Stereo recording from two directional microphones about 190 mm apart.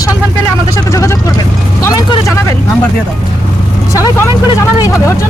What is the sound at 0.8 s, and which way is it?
Speech, 15° left (ahead or behind).